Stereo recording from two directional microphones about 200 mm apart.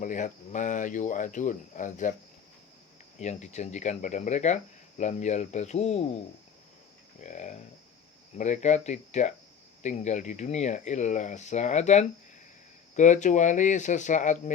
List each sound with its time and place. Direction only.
0.0 s speech: 40° left (ahead or behind)
3.2 s speech: 35° left (ahead or behind)
7.2 s speech: 35° left (ahead or behind)